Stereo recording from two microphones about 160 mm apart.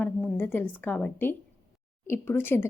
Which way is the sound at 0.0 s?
10° left (ahead or behind).